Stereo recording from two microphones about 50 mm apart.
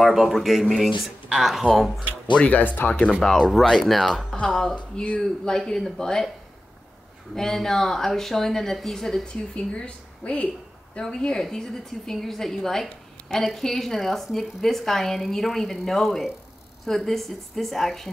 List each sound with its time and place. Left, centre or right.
0.0 s a woman's voice: centre
2.3 s speech: left
3.2 s speech: centre
3.7 s a woman's voice: centre
7.3 s speech: centre
9.2 s a woman's voice: centre